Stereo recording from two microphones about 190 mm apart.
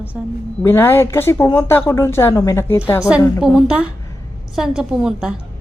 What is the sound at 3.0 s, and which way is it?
A woman's voice, 5° right (ahead or behind).